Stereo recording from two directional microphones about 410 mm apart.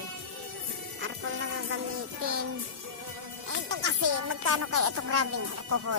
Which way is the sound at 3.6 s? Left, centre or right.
Right.